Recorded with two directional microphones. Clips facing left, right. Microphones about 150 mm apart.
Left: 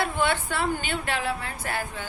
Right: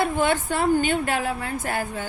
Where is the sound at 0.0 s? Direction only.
45° right (ahead or behind).